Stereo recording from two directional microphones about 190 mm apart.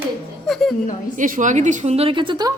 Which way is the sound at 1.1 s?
45° right (ahead or behind).